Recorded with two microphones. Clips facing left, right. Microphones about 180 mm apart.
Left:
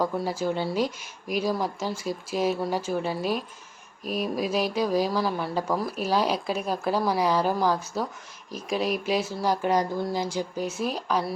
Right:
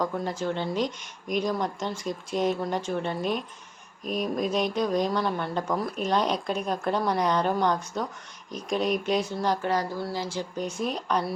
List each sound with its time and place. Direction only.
0.0 s speech: 10° left (ahead or behind)